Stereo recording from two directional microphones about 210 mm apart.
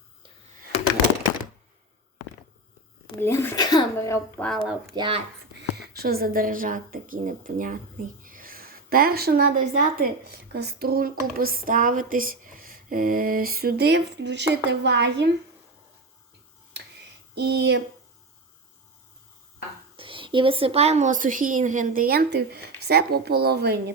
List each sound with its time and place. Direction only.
3.2 s speech: 10° left (ahead or behind)
4.9 s speech: 25° right (ahead or behind)
5.7 s a woman's voice: 50° right (ahead or behind)
17.3 s a woman's voice: 50° right (ahead or behind)
20.0 s a woman's voice: 25° right (ahead or behind); by 23.9 s 50° right (ahead or behind)